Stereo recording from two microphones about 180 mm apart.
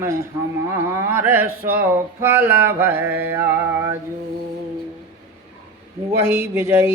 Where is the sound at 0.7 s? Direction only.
15° right (ahead or behind).